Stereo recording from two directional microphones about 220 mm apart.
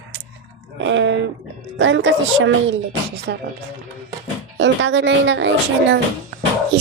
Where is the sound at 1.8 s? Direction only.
55° right (ahead or behind).